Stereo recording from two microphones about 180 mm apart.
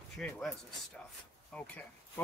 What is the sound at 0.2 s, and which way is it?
Speech, centre (ahead or behind).